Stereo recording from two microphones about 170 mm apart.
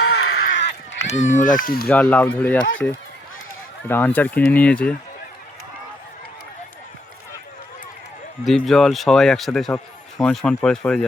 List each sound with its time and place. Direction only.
0.1 s a sound: 70° left (ahead or behind)
0.9 s speech: 40° left (ahead or behind)
1.9 s speech: 10° left (ahead or behind)
8.4 s a man's voice: centre (ahead or behind)